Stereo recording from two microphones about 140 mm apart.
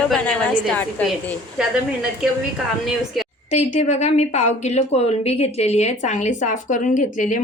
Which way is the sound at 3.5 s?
55° left (ahead or behind).